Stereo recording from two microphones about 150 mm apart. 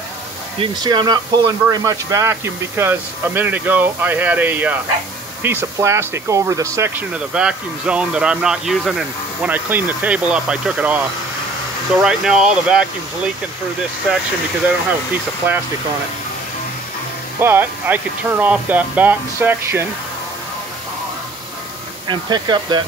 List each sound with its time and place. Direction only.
0.6 s speech: 30° right (ahead or behind)
7.2 s speech: 5° right (ahead or behind)
17.4 s speech: 15° right (ahead or behind)
22.0 s speech: 30° right (ahead or behind)